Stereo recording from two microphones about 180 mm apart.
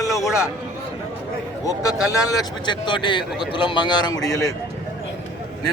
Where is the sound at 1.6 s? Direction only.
20° left (ahead or behind).